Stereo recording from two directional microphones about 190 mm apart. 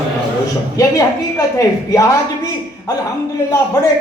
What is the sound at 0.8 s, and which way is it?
A woman's voice, 15° left (ahead or behind).